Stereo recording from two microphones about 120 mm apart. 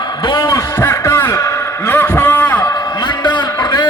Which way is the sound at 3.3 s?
35° left (ahead or behind).